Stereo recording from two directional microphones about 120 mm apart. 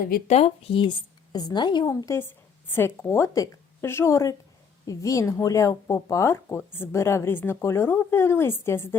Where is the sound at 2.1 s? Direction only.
20° left (ahead or behind).